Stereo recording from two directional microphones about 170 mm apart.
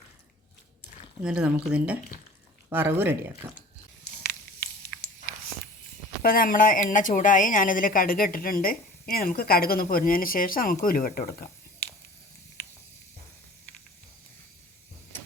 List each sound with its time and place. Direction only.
1.2 s speech: 5° right (ahead or behind)
6.2 s a woman's voice: 55° left (ahead or behind)